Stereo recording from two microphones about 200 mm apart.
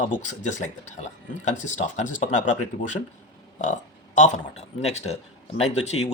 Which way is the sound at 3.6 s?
40° left (ahead or behind).